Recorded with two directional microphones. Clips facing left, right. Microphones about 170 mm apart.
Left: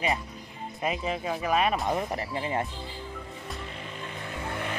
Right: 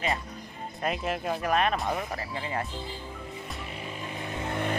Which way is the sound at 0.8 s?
Centre (ahead or behind).